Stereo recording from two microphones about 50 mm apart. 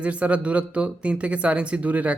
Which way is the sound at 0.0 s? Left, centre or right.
Right.